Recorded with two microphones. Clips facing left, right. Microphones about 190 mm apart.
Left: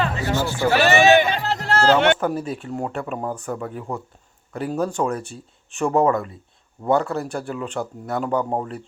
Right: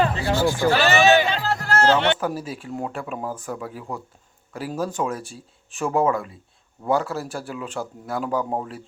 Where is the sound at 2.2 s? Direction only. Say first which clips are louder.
Left 3 dB; centre (ahead or behind).